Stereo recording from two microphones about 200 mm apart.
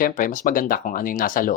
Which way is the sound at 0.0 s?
45° left (ahead or behind).